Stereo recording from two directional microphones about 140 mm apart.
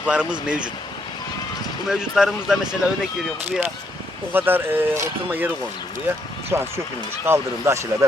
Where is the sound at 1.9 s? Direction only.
5° right (ahead or behind).